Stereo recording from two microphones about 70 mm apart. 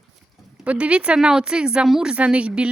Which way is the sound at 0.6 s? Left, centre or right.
Centre.